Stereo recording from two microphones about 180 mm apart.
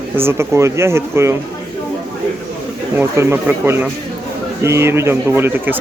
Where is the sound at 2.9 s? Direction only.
15° right (ahead or behind).